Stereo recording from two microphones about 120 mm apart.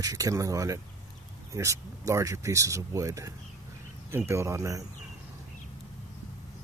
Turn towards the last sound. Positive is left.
turn(degrees=-25)  # may be behind; listen again after turning